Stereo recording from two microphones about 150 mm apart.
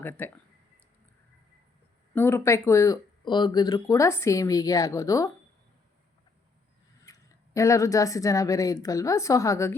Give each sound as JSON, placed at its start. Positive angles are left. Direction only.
{"t": 0.0, "sound": "speech", "side_deg": 15}
{"t": 2.1, "sound": "speech", "side_deg": 15}
{"t": 7.0, "sound": "speech", "side_deg": 20}